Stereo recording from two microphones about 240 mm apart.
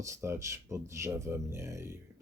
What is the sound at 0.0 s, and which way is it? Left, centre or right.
Speech, centre.